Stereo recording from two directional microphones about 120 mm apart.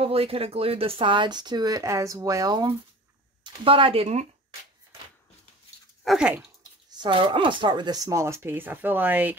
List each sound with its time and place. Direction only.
0.0 s speech: 55° right (ahead or behind); by 2.7 s 35° right (ahead or behind)
3.4 s speech: 50° right (ahead or behind)
6.0 s speech: 5° right (ahead or behind)
6.9 s speech: 40° right (ahead or behind); by 9.3 s 15° right (ahead or behind)